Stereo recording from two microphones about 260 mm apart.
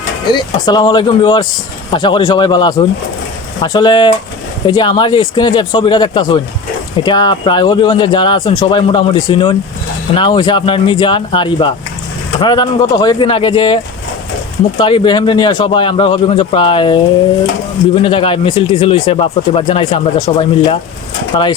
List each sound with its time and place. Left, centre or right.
0.3 s speech: centre
14.8 s speech: centre